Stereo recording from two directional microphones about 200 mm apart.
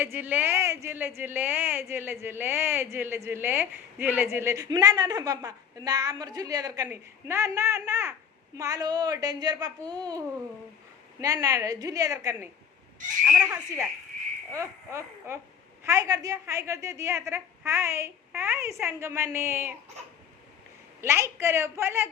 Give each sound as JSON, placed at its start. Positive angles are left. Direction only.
{"t": 0.0, "sound": "a child's voice", "side_deg": -10}
{"t": 13.2, "sound": "speech", "side_deg": -5}
{"t": 14.5, "sound": "speech", "side_deg": -15}
{"t": 21.0, "sound": "speech", "side_deg": -10}